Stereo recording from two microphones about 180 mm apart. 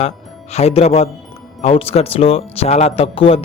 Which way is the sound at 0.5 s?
35° left (ahead or behind).